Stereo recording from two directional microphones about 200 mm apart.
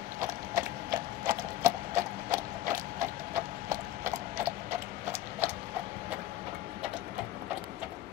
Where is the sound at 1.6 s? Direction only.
15° right (ahead or behind).